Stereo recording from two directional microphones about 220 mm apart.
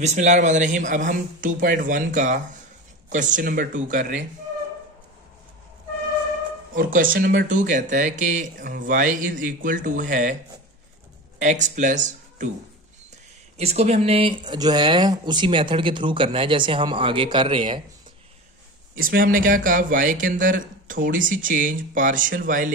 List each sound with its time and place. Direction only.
0.0 s speech: 35° right (ahead or behind)
6.7 s speech: 40° right (ahead or behind)
11.3 s speech: 35° right (ahead or behind)
13.6 s speech: 30° right (ahead or behind)
18.9 s speech: 40° right (ahead or behind)